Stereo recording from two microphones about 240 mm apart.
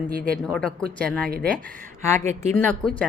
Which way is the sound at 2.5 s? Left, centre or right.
Centre.